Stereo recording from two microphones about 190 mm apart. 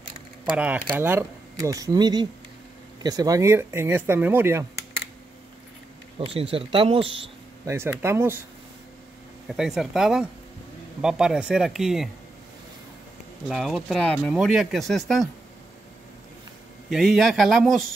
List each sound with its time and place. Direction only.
0.5 s speech: 5° right (ahead or behind)
6.1 s speech: 30° right (ahead or behind)
7.6 s speech: 15° right (ahead or behind)
9.5 s speech: centre (ahead or behind)
13.5 s speech: centre (ahead or behind)
16.9 s speech: centre (ahead or behind)